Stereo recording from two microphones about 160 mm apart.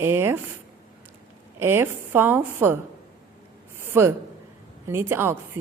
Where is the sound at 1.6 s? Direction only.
15° right (ahead or behind).